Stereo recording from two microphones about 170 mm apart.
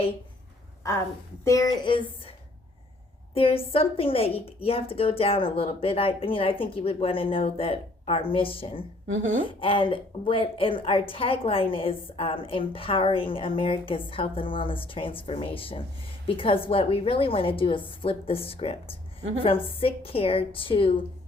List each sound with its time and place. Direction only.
1.5 s speech: 20° left (ahead or behind)
3.3 s a woman's voice: 35° left (ahead or behind)